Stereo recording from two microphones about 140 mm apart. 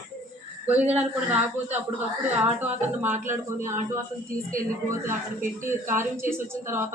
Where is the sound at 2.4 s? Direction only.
15° right (ahead or behind).